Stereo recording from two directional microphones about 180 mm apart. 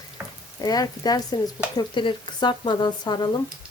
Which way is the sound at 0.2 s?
10° right (ahead or behind).